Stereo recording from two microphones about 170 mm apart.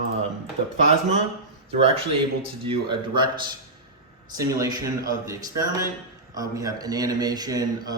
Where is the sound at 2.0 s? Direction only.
30° right (ahead or behind).